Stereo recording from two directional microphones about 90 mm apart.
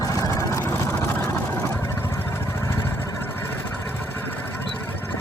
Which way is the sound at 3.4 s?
20° left (ahead or behind).